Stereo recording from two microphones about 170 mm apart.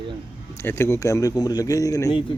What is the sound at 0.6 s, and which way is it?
Speech, 15° left (ahead or behind).